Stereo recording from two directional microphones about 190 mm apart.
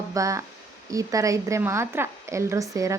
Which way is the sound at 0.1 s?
15° right (ahead or behind).